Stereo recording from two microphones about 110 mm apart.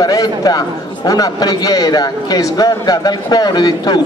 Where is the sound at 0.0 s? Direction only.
35° left (ahead or behind).